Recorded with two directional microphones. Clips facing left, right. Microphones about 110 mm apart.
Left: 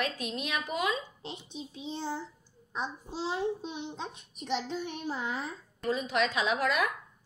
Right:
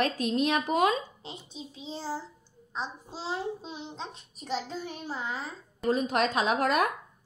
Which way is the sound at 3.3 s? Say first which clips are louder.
Even; centre (ahead or behind).